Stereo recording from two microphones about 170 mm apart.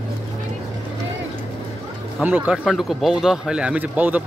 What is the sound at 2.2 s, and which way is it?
A man's voice, 5° right (ahead or behind).